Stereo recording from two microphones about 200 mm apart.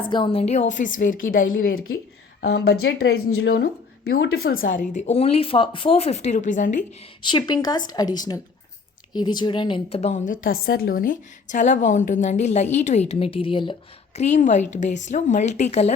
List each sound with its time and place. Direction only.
0.1 s a woman's voice: 25° left (ahead or behind)
7.2 s a woman's voice: 20° left (ahead or behind)
14.2 s a woman's voice: 35° left (ahead or behind)